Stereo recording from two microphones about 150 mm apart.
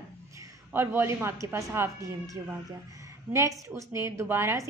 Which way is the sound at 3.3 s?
20° right (ahead or behind).